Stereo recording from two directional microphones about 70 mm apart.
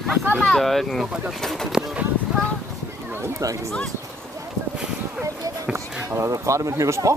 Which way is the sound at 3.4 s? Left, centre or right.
Right.